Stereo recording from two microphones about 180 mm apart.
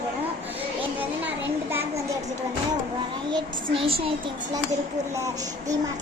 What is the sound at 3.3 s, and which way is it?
Speech, 30° right (ahead or behind).